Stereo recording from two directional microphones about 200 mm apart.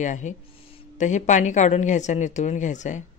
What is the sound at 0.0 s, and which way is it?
Speech, 35° left (ahead or behind).